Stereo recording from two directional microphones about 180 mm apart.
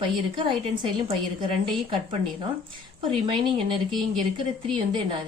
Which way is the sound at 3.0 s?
30° right (ahead or behind).